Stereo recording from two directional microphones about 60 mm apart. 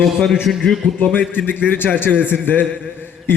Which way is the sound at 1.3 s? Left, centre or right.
Left.